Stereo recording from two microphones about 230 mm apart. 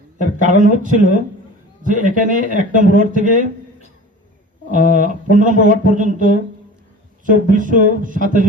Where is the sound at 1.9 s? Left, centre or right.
Right.